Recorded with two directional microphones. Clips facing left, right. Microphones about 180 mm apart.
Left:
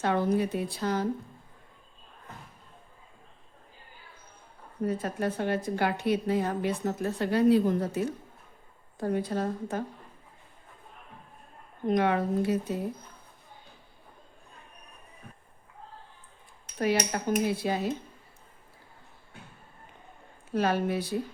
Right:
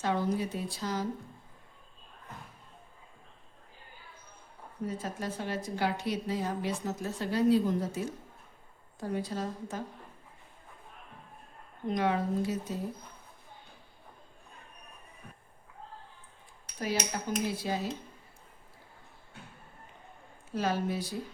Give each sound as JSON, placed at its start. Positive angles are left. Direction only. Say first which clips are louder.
{"t": 0.0, "sound": "a woman's voice", "louder": "left 4 dB", "side_deg": 60}
{"t": 4.9, "sound": "a woman's voice", "louder": "left 7 dB", "side_deg": 60}
{"t": 11.9, "sound": "a woman's voice", "louder": "left 4 dB", "side_deg": 60}
{"t": 16.7, "sound": "a woman's voice", "louder": "left 6 dB", "side_deg": 65}
{"t": 20.5, "sound": "a woman's voice", "louder": "left 4 dB", "side_deg": 65}